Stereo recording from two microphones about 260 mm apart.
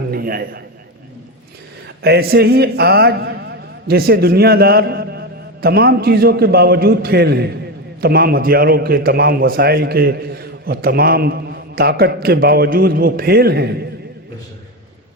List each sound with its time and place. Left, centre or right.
0.1 s a man's voice: right
2.0 s a man's voice: right